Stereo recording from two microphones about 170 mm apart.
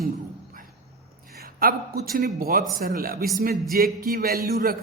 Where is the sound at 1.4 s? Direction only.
60° right (ahead or behind).